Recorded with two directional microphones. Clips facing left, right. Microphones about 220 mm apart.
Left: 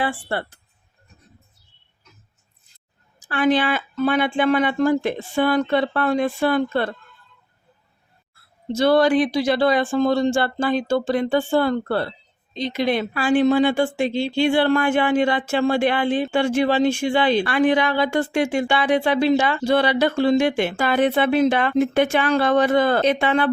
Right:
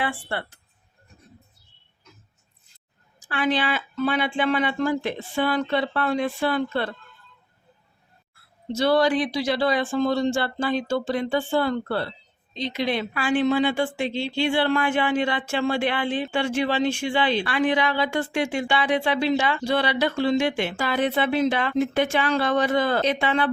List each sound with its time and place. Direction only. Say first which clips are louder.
0.0 s speech: left 4 dB; 40° left (ahead or behind)
3.2 s speech: left 5 dB; 45° left (ahead or behind)
8.7 s speech: left 4 dB; 50° left (ahead or behind)